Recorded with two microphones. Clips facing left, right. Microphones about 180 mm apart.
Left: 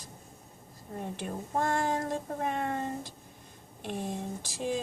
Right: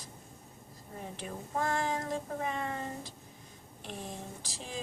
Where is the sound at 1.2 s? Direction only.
50° left (ahead or behind).